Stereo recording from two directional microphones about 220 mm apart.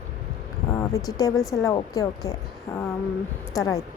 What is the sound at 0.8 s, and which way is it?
A woman's voice, 15° left (ahead or behind).